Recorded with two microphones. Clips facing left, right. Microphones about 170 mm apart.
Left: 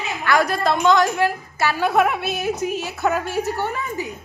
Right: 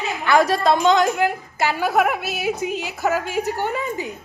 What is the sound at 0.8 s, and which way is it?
A woman's voice, 15° right (ahead or behind).